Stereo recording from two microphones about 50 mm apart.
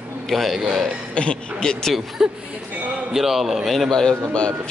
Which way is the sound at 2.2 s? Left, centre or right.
Centre.